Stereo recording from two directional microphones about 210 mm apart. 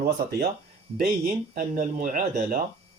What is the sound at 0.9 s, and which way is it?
Speech, 45° right (ahead or behind).